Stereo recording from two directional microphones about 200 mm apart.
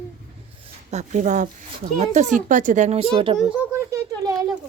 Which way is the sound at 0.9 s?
35° right (ahead or behind).